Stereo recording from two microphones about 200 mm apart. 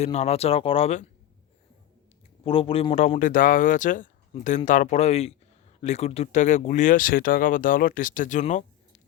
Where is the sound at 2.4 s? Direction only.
25° left (ahead or behind).